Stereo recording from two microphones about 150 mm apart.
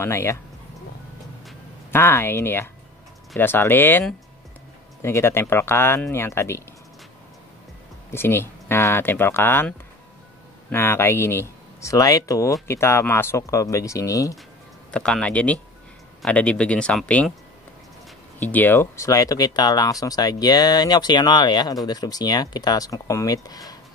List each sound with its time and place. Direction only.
0.0 s speech: 15° left (ahead or behind)
1.9 s speech: 15° left (ahead or behind)
5.0 s speech: 15° left (ahead or behind)
8.1 s speech: 15° left (ahead or behind)
14.9 s speech: 5° left (ahead or behind)
18.4 s speech: 10° left (ahead or behind)